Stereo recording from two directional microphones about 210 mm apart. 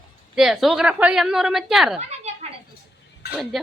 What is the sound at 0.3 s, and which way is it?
Speech, centre (ahead or behind).